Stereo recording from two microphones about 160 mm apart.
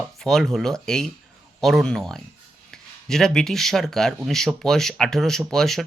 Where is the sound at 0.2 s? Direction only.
Centre (ahead or behind).